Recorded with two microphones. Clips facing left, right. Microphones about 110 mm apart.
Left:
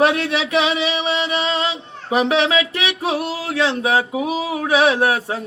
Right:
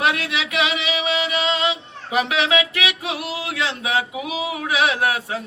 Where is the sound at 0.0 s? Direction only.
35° left (ahead or behind).